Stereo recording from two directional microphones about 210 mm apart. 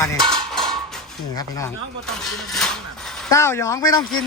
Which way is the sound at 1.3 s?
15° left (ahead or behind).